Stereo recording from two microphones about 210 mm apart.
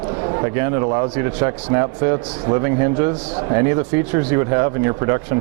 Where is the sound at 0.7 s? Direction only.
20° right (ahead or behind).